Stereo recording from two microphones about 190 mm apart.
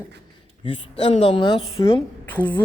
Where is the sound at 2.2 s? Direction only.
10° left (ahead or behind).